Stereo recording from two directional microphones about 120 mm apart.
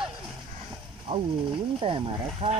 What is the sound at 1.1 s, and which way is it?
Speech, 50° right (ahead or behind).